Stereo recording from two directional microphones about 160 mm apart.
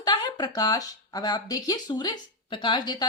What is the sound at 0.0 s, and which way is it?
Speech, 25° left (ahead or behind).